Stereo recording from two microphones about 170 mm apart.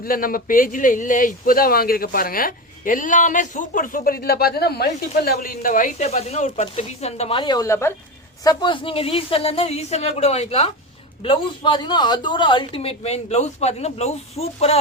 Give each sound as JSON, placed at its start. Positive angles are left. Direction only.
{"t": 0.0, "sound": "a man's voice", "side_deg": 55}
{"t": 8.4, "sound": "a woman's voice", "side_deg": 30}